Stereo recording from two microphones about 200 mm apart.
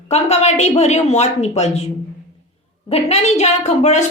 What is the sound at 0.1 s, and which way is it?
A woman's voice, 30° left (ahead or behind).